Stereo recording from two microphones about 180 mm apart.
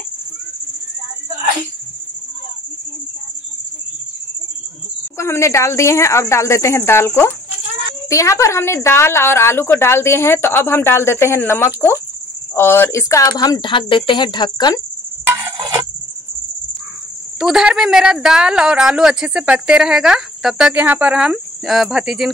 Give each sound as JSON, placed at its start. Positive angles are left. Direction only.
{"t": 5.1, "sound": "a woman's voice", "side_deg": 15}
{"t": 15.2, "sound": "a sound", "side_deg": -15}
{"t": 17.4, "sound": "speech", "side_deg": -5}